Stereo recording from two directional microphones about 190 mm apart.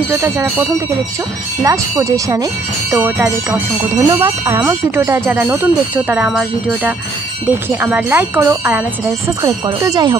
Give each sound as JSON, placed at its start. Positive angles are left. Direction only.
{"t": 0.1, "sound": "speech", "side_deg": -15}